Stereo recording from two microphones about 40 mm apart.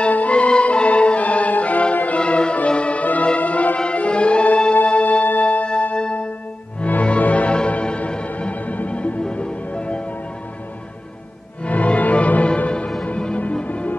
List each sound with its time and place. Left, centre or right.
0.1 s music: left
7.1 s music: left
7.5 s music: left
11.6 s music: left
13.7 s music: left